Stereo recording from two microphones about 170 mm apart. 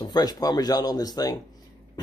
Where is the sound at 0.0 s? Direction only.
25° left (ahead or behind).